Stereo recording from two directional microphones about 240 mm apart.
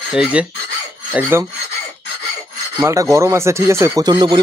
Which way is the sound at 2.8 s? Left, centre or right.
Centre.